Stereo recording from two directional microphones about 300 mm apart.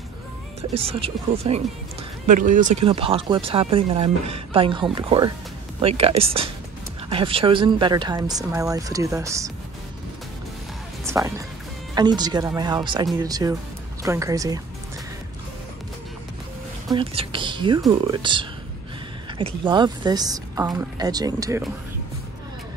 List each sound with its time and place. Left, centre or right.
0.6 s speech: centre
11.1 s speech: centre
16.9 s speech: centre